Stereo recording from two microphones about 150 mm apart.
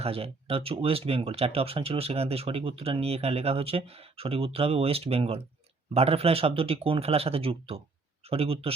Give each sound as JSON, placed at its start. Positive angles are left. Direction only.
{"t": 0.0, "sound": "speech", "side_deg": -40}